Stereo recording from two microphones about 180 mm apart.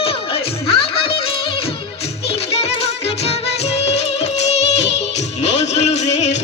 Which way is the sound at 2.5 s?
35° left (ahead or behind).